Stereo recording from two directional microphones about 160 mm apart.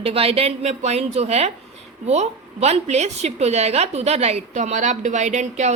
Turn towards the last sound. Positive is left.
turn(degrees=-45)  # may be behind; listen again after turning